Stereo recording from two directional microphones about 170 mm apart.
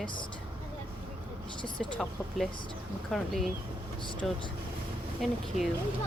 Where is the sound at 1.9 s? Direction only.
Centre (ahead or behind).